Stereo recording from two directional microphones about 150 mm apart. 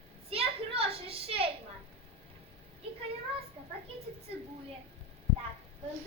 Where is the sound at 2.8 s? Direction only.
35° right (ahead or behind).